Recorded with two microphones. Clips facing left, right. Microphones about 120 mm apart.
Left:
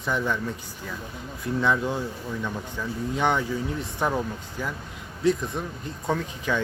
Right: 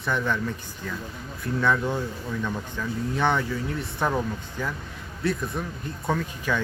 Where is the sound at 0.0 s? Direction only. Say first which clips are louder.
Even; 15° left (ahead or behind).